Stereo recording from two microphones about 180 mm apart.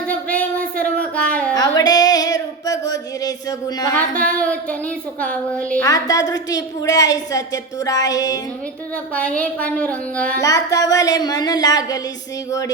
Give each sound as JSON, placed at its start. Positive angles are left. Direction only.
{"t": 0.1, "sound": "a sound", "side_deg": 5}
{"t": 1.1, "sound": "music", "side_deg": 5}
{"t": 1.5, "sound": "music", "side_deg": 20}
{"t": 4.3, "sound": "speech", "side_deg": 5}
{"t": 5.8, "sound": "a woman's voice", "side_deg": 20}
{"t": 9.1, "sound": "speech", "side_deg": 5}
{"t": 10.4, "sound": "a woman's voice", "side_deg": 20}